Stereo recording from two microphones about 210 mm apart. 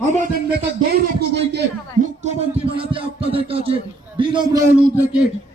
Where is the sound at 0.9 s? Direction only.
50° right (ahead or behind).